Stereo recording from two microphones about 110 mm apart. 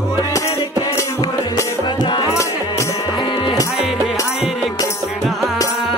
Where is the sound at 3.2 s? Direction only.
45° left (ahead or behind).